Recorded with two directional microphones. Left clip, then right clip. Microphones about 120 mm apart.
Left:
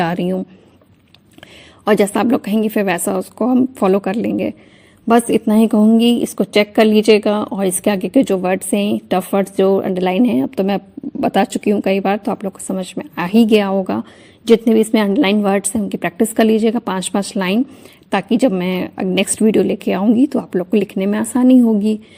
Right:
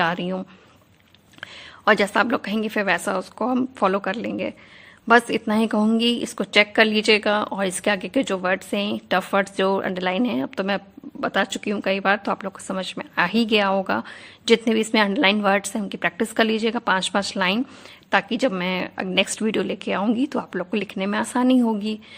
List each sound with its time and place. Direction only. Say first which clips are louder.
0.0 s a woman's voice: left 4 dB; 30° left (ahead or behind)
1.4 s a woman's voice: right 2 dB; 25° left (ahead or behind)
3.8 s a woman's voice: left 4 dB; 35° left (ahead or behind); by 9.9 s 15° left (ahead or behind)
9.9 s a woman's voice: left 7 dB; 30° left (ahead or behind)